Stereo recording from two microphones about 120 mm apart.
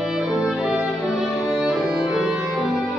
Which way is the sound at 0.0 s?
5° right (ahead or behind).